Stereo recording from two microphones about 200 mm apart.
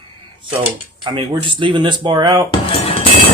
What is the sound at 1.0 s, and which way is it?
Speech, 25° right (ahead or behind).